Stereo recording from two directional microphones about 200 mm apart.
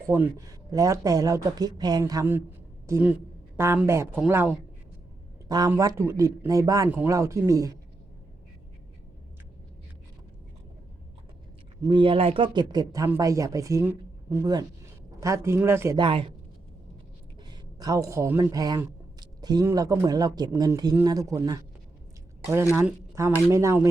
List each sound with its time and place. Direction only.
0.1 s speech: 15° right (ahead or behind)
5.5 s speech: 20° right (ahead or behind)
11.9 s speech: 25° right (ahead or behind)
16.0 s speech: 25° right (ahead or behind)
17.5 s a man's voice: 20° right (ahead or behind)
22.7 s speech: 15° right (ahead or behind)